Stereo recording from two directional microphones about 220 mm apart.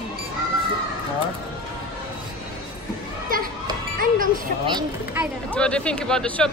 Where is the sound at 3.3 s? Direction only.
40° right (ahead or behind).